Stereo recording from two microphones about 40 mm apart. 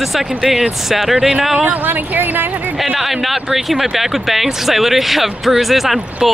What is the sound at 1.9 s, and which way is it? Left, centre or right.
Speech, right.